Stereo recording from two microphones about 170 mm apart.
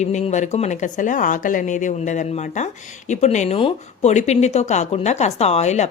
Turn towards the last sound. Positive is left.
turn(degrees=40)  # may be behind; listen again after turning